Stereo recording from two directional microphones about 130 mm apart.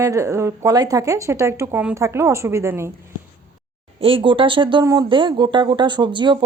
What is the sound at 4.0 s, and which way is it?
Speech, 45° right (ahead or behind).